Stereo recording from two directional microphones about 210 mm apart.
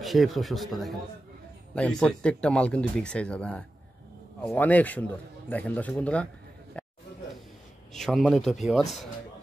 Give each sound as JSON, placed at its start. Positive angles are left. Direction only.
{"t": 0.0, "sound": "a man's voice", "side_deg": 0}
{"t": 7.9, "sound": "speech", "side_deg": 0}